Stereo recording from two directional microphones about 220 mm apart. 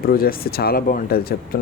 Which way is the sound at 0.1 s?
40° left (ahead or behind).